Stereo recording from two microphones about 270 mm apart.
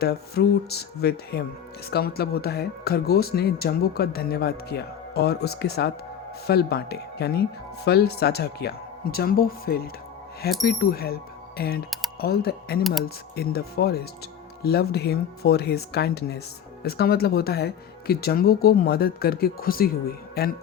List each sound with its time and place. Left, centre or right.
0.0 s speech: left
12.8 s speech: centre
13.3 s speech: left